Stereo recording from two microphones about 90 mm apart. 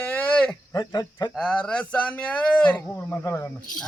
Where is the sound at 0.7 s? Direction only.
45° left (ahead or behind).